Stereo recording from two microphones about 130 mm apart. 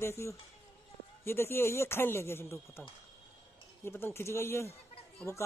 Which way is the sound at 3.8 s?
20° left (ahead or behind).